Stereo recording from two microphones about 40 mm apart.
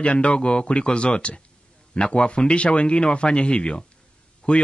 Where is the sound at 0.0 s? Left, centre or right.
Left.